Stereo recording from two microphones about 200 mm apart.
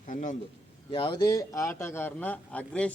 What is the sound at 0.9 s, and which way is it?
A man's voice, 25° left (ahead or behind).